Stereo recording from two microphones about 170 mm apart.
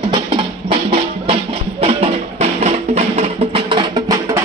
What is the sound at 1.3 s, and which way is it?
Music, 35° right (ahead or behind).